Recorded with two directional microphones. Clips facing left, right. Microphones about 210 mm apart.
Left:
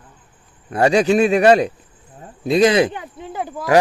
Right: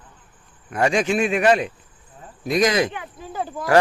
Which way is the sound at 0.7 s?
35° left (ahead or behind).